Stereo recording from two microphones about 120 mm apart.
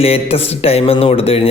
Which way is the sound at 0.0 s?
55° left (ahead or behind).